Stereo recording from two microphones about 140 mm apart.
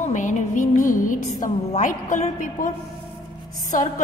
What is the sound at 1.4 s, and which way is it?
A woman's voice, 65° left (ahead or behind).